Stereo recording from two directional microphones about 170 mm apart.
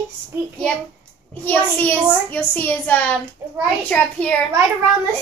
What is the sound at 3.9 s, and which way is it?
Speech, 5° left (ahead or behind).